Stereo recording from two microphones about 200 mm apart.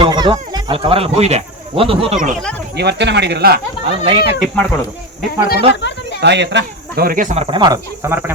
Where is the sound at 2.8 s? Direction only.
60° right (ahead or behind).